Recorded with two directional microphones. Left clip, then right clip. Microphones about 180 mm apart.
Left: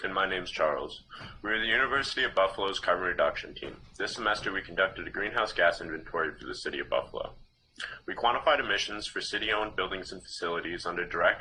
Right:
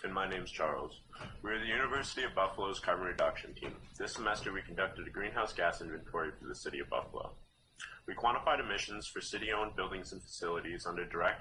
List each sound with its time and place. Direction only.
0.0 s speech: 35° left (ahead or behind)